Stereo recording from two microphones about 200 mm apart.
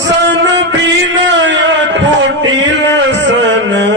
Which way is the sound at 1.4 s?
65° right (ahead or behind).